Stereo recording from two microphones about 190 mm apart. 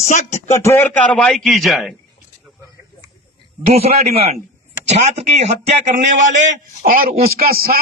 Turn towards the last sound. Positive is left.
turn(degrees=-50)  # may be behind; listen again after turning